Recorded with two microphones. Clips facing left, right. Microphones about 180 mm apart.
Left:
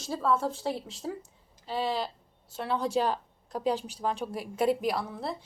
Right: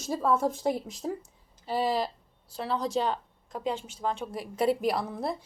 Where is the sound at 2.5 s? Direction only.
5° left (ahead or behind).